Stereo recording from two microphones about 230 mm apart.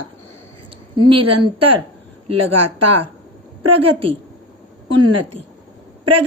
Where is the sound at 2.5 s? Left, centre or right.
Right.